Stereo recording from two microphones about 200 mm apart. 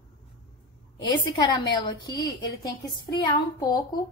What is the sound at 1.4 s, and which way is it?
A woman's voice, 20° left (ahead or behind).